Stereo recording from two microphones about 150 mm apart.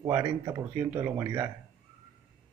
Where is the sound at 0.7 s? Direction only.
15° right (ahead or behind).